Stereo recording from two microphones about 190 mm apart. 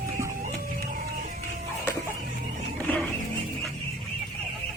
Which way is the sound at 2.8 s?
Centre (ahead or behind).